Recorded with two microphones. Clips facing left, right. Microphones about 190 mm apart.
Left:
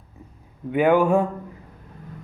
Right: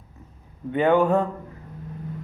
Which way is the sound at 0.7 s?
10° left (ahead or behind).